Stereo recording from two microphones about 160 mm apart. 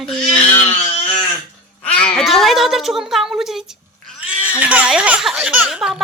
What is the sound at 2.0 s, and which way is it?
Cat, centre (ahead or behind).